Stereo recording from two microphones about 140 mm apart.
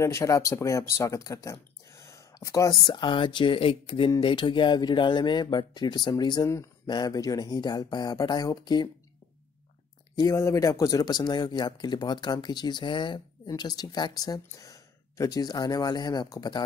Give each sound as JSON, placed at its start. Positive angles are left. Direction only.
{"t": 0.0, "sound": "speech", "side_deg": 20}
{"t": 2.9, "sound": "speech", "side_deg": 35}
{"t": 10.1, "sound": "speech", "side_deg": 25}